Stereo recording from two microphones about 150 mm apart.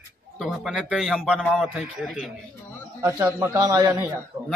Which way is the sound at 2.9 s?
20° right (ahead or behind).